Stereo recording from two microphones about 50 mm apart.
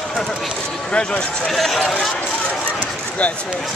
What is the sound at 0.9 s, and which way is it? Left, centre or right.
Speech, left.